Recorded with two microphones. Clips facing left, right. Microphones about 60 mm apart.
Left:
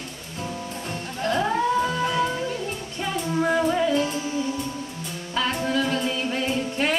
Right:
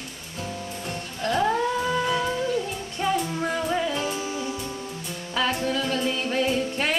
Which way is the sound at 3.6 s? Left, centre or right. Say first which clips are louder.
Left 4 dB; centre.